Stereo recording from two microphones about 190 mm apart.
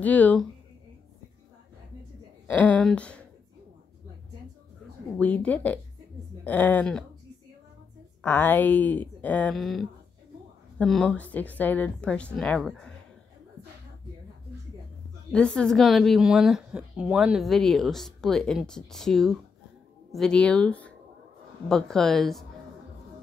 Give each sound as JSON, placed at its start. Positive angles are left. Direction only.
{"t": 0.0, "sound": "speech", "side_deg": 10}
{"t": 2.4, "sound": "speech", "side_deg": 5}
{"t": 5.1, "sound": "speech", "side_deg": 5}
{"t": 8.2, "sound": "a woman's voice", "side_deg": 10}
{"t": 15.3, "sound": "a woman's voice", "side_deg": 5}